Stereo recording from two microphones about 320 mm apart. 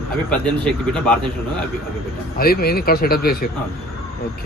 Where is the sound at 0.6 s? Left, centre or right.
Centre.